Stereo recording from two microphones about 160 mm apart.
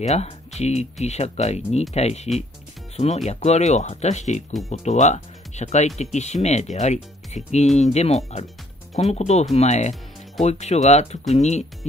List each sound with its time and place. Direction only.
0.0 s speech: 45° left (ahead or behind)
3.3 s speech: 45° left (ahead or behind)